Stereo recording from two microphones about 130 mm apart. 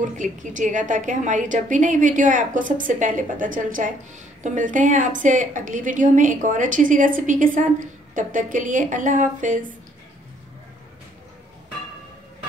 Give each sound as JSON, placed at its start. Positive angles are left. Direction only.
{"t": 0.0, "sound": "a woman's voice", "side_deg": -75}
{"t": 4.4, "sound": "a woman's voice", "side_deg": -80}